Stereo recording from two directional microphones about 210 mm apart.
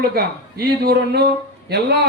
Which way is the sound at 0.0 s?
45° right (ahead or behind).